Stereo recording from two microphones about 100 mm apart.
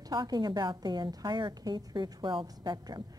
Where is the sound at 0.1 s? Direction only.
45° right (ahead or behind).